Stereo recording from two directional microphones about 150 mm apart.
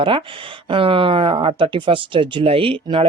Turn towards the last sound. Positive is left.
turn(degrees=-35)  # may be behind; listen again after turning